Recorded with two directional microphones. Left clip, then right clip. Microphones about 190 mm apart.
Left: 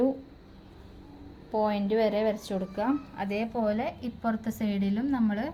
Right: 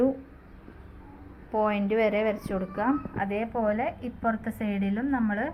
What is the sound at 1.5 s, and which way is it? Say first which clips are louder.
A woman's voice: right 1 dB; 10° left (ahead or behind).